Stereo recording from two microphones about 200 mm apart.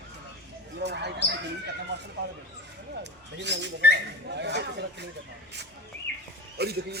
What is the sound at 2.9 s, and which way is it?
Bird, 60° right (ahead or behind).